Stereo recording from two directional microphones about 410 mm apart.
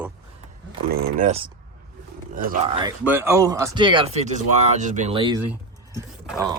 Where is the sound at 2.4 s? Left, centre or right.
Centre.